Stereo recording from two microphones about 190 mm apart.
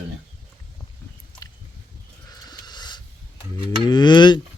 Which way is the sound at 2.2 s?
20° left (ahead or behind).